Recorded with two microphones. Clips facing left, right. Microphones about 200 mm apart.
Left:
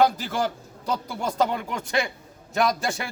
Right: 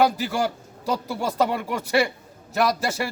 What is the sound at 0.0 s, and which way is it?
A man's voice, 10° right (ahead or behind).